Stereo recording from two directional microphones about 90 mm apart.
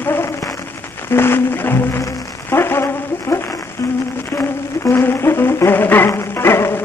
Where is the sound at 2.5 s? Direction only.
25° left (ahead or behind).